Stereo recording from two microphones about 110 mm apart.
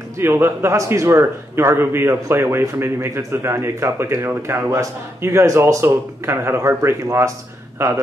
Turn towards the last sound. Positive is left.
turn(degrees=-25)  # may be behind; listen again after turning